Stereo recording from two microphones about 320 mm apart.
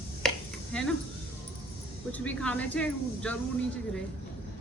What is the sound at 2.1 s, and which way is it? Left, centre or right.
Speech, centre.